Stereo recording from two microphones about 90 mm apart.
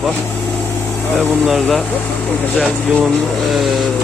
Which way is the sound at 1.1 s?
Centre (ahead or behind).